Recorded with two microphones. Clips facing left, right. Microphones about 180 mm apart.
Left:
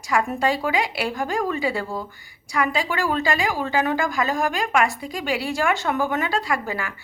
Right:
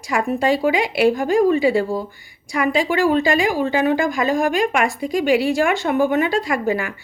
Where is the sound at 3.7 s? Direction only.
40° left (ahead or behind).